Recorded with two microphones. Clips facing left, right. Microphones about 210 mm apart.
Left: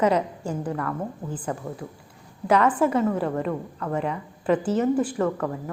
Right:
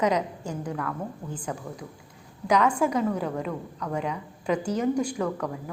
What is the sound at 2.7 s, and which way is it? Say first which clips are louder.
A woman's voice: left 3 dB; 5° left (ahead or behind).